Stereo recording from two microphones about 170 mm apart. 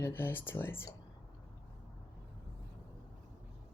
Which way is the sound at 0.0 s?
10° left (ahead or behind).